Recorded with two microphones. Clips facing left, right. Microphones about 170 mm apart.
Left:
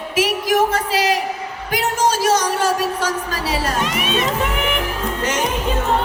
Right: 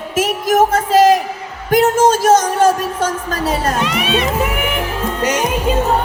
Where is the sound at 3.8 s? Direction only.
45° left (ahead or behind).